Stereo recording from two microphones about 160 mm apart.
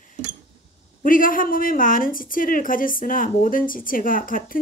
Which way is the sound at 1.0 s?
60° left (ahead or behind).